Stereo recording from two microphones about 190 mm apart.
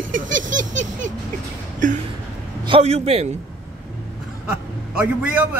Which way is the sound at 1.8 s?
40° right (ahead or behind).